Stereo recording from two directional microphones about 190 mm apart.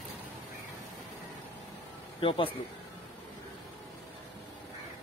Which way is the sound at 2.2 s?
30° left (ahead or behind).